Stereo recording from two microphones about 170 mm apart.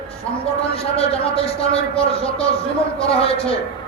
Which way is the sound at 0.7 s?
35° left (ahead or behind).